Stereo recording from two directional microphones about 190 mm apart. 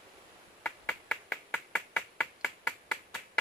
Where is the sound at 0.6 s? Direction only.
5° left (ahead or behind).